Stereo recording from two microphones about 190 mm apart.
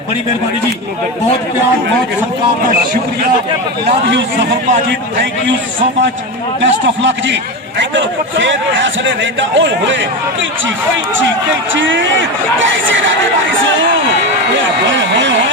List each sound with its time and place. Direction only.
6.6 s a man's voice: 70° right (ahead or behind)
11.7 s speech: 80° right